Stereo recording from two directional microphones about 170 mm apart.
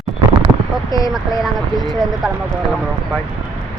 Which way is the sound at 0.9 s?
20° left (ahead or behind).